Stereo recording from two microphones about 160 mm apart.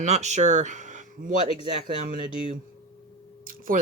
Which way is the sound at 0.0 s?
45° right (ahead or behind).